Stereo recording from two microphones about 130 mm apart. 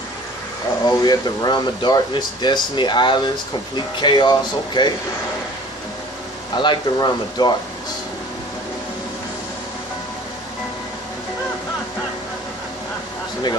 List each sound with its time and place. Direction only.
0.8 s speech: 30° left (ahead or behind)
6.5 s speech: 35° left (ahead or behind)